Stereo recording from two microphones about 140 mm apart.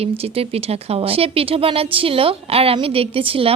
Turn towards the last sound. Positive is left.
turn(degrees=-40)  # may be behind; listen again after turning